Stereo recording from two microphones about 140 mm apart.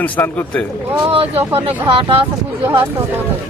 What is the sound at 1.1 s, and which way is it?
Speech, 45° right (ahead or behind).